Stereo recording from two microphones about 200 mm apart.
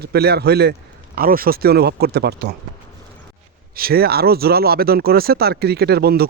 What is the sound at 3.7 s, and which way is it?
Speech, 50° right (ahead or behind).